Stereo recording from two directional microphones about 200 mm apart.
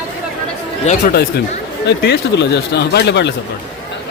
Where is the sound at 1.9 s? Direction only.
60° left (ahead or behind).